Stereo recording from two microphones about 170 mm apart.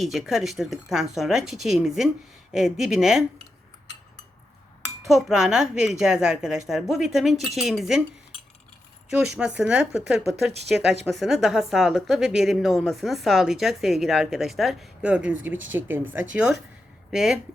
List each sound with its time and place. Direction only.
0.0 s a woman's voice: centre (ahead or behind)
5.0 s a woman's voice: centre (ahead or behind)
9.0 s a woman's voice: 5° right (ahead or behind)
10.6 s speech: 80° right
11.0 s a woman's voice: centre (ahead or behind)